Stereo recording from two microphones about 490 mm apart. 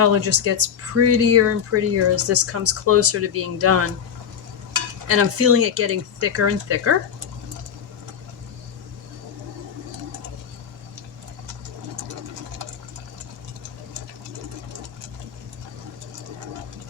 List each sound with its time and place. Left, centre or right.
0.0 s speech: right
5.0 s speech: right